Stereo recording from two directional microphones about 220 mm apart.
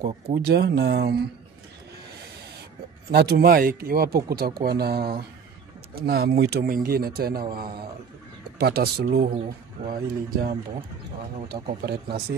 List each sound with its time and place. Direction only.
0.4 s speech: 45° right (ahead or behind)
3.1 s speech: 45° right (ahead or behind)